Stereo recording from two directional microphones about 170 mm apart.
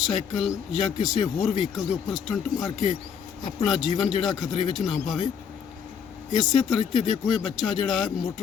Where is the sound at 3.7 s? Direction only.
Centre (ahead or behind).